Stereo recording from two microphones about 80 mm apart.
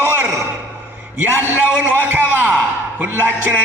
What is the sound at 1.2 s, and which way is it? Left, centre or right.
Speech, right.